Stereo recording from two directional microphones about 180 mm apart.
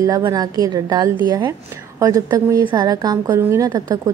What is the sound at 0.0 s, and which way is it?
A woman's voice, 20° right (ahead or behind).